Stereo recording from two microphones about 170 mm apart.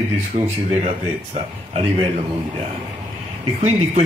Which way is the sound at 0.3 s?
40° right (ahead or behind).